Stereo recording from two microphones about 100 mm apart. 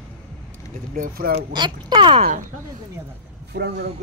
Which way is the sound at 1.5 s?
45° right (ahead or behind).